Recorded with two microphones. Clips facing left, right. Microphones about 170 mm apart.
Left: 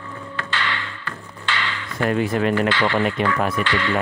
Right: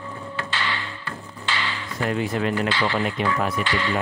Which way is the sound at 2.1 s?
60° left (ahead or behind).